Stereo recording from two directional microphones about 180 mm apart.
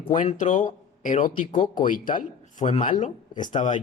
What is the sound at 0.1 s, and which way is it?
Speech, 45° left (ahead or behind).